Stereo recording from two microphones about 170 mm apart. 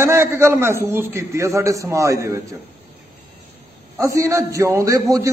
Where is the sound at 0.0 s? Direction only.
15° right (ahead or behind).